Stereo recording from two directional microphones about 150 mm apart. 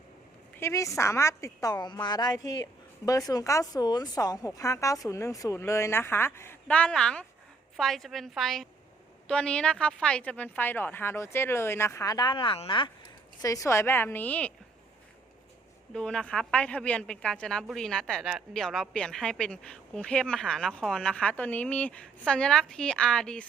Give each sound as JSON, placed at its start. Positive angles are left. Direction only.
{"t": 0.6, "sound": "a woman's voice", "side_deg": 20}
{"t": 13.4, "sound": "a woman's voice", "side_deg": 20}
{"t": 15.9, "sound": "a woman's voice", "side_deg": 5}